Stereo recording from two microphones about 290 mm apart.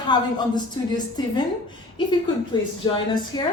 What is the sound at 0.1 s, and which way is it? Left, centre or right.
A woman's voice, centre.